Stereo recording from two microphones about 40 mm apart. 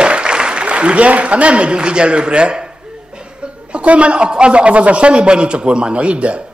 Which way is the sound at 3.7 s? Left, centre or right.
Right.